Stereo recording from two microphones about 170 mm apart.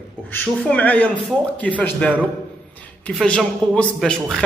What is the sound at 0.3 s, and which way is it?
Speech, 10° left (ahead or behind).